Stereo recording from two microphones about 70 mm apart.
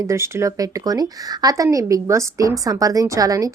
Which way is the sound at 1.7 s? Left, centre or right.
Right.